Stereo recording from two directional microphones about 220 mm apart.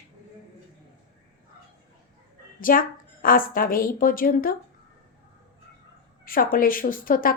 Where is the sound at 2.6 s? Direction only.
40° left (ahead or behind).